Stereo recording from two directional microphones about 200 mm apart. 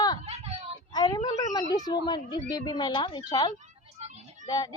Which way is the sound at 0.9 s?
20° left (ahead or behind).